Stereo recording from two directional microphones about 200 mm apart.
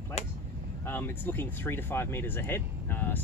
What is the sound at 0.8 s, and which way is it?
Speech, 10° left (ahead or behind).